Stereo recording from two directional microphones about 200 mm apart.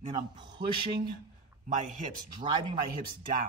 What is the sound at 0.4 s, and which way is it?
Speech, 25° right (ahead or behind).